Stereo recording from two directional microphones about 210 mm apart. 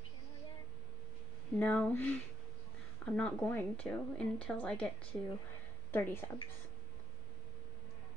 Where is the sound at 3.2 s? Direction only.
5° left (ahead or behind).